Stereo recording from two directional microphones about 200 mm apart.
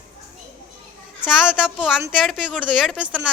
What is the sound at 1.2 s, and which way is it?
A woman's voice, 5° right (ahead or behind).